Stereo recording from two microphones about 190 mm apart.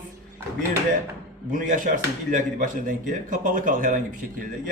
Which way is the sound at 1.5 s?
45° right (ahead or behind).